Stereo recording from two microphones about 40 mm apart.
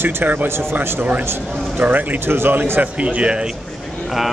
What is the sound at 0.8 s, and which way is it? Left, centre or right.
Speech, right.